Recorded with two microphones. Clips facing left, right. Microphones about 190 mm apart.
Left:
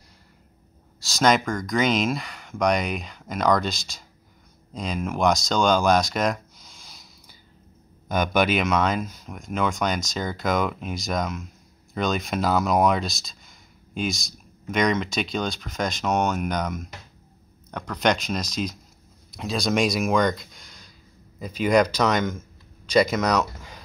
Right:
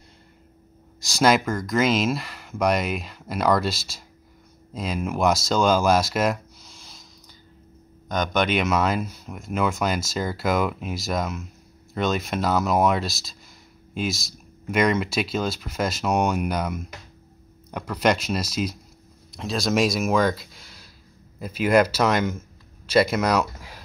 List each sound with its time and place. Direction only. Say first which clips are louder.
1.0 s speech: right 1 dB; 10° right (ahead or behind)
8.1 s speech: left 1 dB; 5° left (ahead or behind)